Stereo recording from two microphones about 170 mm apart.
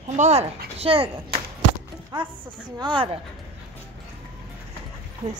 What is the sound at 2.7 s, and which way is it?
Speech, 30° right (ahead or behind).